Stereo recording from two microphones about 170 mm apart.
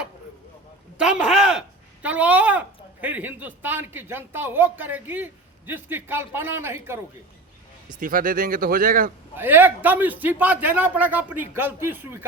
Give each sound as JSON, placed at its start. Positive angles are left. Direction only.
{"t": 0.9, "sound": "speech", "side_deg": -5}
{"t": 7.9, "sound": "speech", "side_deg": -55}
{"t": 9.3, "sound": "a man's voice", "side_deg": -10}